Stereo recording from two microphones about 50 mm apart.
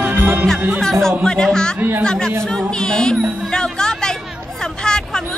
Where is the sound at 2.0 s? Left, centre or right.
Centre.